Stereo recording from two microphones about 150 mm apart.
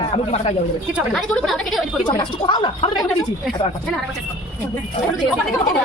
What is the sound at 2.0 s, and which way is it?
Speech, 35° left (ahead or behind).